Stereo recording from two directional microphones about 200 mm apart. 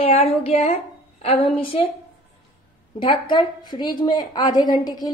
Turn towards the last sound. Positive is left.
turn(degrees=20)  # may be behind; listen again after turning